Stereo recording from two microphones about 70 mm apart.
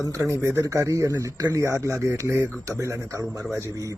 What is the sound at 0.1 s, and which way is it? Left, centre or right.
Speech, right.